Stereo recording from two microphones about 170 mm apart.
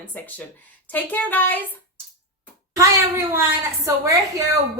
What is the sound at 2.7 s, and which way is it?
A child's voice, 20° right (ahead or behind).